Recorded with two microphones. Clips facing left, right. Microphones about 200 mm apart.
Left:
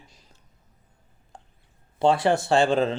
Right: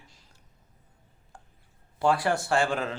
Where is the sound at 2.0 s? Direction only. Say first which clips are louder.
Left 4 dB; 25° left (ahead or behind).